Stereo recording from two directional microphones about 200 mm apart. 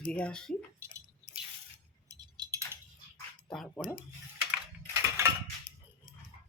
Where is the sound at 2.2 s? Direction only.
20° right (ahead or behind).